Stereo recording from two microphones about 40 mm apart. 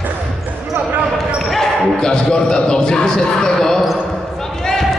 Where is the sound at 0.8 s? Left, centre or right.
Right.